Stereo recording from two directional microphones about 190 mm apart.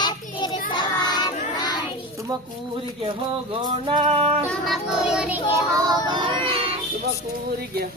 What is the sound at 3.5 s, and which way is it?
Music, 25° right (ahead or behind).